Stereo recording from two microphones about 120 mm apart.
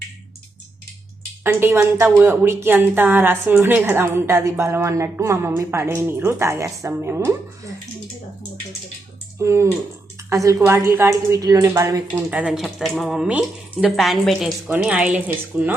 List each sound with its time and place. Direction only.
1.5 s a woman's voice: 20° right (ahead or behind)
9.4 s a woman's voice: 25° right (ahead or behind)
12.1 s a woman's voice: 10° right (ahead or behind)